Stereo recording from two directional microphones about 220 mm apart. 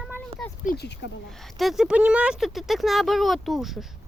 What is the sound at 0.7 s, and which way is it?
Speech, 50° left (ahead or behind).